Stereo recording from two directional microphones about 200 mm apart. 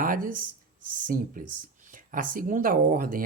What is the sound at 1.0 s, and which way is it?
Speech, 45° right (ahead or behind).